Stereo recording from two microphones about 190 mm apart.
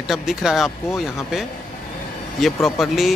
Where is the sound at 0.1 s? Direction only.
Centre (ahead or behind).